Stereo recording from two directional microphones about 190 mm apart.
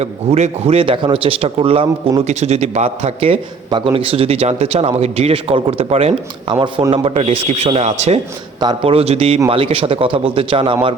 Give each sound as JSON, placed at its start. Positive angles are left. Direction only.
{"t": 0.0, "sound": "a man's voice", "side_deg": -35}